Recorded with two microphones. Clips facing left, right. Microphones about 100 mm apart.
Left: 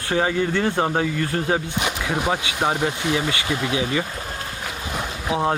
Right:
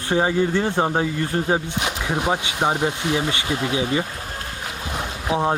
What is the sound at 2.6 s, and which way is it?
Speech, 20° right (ahead or behind).